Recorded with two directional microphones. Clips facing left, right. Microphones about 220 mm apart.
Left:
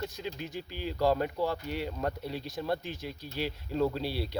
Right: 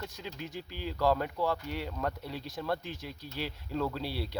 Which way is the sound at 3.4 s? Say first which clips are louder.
Left 4 dB; 20° left (ahead or behind).